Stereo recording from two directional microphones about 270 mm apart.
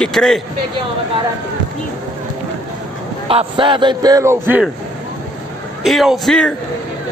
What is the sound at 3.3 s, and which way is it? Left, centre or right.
A man's voice, centre.